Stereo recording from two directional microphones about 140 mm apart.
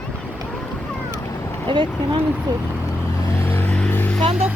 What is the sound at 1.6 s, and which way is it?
Speech, 35° right (ahead or behind).